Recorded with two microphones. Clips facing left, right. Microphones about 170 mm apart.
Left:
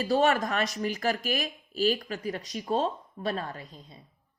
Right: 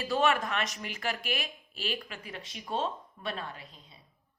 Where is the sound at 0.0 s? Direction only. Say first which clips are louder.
Left 4 dB; 40° left (ahead or behind).